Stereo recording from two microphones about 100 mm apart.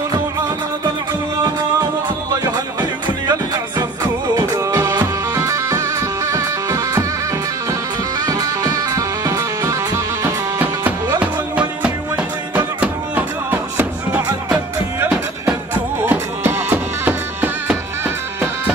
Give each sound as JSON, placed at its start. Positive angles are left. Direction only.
{"t": 2.4, "sound": "music", "side_deg": -40}
{"t": 4.4, "sound": "music", "side_deg": -30}
{"t": 8.3, "sound": "music", "side_deg": -35}
{"t": 11.8, "sound": "music", "side_deg": -15}
{"t": 16.1, "sound": "music", "side_deg": -20}